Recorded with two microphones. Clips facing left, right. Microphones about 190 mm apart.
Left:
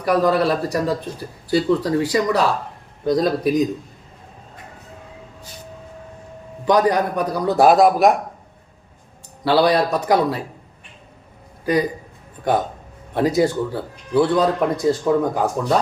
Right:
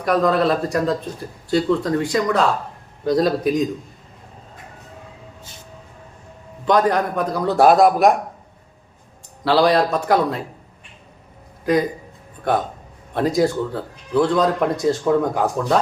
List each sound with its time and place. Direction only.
0.0 s a man's voice: 5° left (ahead or behind)
6.7 s a man's voice: 5° left (ahead or behind)
9.4 s a man's voice: centre (ahead or behind)
11.6 s a man's voice: 5° left (ahead or behind)
13.1 s a man's voice: centre (ahead or behind)